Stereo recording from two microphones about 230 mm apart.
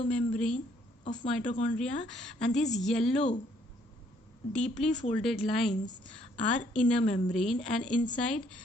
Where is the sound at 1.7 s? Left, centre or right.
Centre.